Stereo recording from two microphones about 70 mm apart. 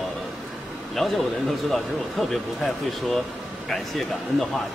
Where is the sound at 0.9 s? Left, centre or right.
Centre.